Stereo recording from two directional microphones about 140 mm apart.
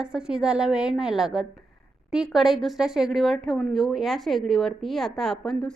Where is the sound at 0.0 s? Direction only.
5° right (ahead or behind).